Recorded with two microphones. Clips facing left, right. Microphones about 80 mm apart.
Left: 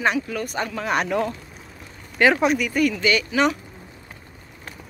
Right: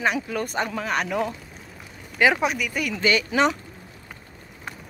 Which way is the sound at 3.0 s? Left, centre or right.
Right.